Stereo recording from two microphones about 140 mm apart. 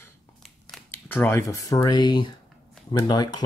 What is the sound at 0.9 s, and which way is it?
Speech, 15° left (ahead or behind).